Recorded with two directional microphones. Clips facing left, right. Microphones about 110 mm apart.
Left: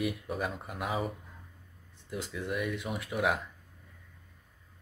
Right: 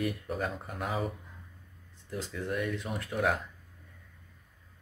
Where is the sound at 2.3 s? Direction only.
10° left (ahead or behind).